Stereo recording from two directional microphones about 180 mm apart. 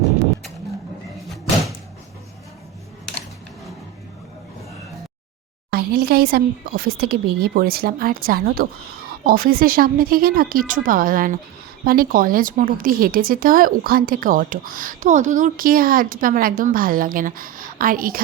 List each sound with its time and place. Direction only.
5.7 s speech: 55° right (ahead or behind)